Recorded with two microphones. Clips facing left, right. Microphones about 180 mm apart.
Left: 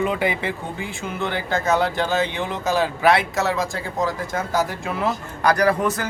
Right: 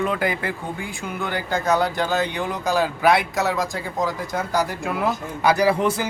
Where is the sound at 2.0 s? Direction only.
10° right (ahead or behind).